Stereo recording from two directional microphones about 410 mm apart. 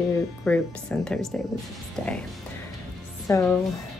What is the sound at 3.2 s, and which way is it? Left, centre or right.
Speech, centre.